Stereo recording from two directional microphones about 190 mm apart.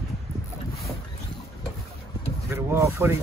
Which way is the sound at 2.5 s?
15° right (ahead or behind).